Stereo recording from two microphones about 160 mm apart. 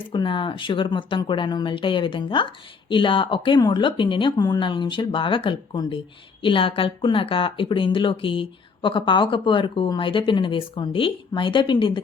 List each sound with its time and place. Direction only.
0.1 s a woman's voice: 30° left (ahead or behind)